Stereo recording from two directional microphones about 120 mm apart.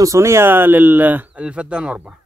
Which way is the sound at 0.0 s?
25° right (ahead or behind).